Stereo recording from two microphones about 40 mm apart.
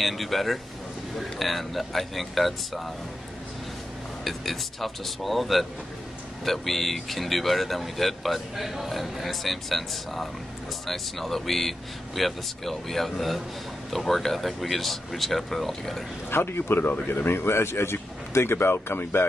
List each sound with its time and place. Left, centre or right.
0.0 s speech: centre
4.2 s speech: centre
16.3 s speech: left
16.8 s speech: left